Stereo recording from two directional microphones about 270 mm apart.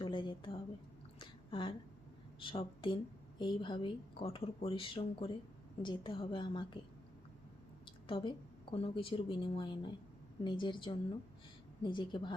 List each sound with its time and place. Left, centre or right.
0.0 s a sound: centre
2.4 s a woman's voice: centre
7.9 s a woman's voice: centre